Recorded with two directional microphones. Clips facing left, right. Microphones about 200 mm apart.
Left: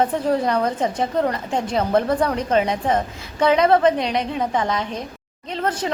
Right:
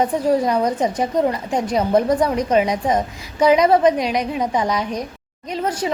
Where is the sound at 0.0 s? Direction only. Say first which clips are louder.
Right 2 dB; 10° right (ahead or behind).